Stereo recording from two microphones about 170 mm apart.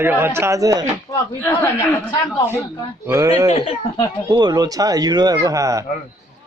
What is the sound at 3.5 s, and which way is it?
Speech, 35° left (ahead or behind).